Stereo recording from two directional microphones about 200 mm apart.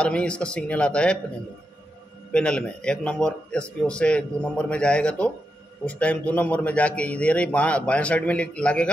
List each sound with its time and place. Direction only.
0.0 s a man's voice: 5° left (ahead or behind)
2.3 s a man's voice: 5° left (ahead or behind)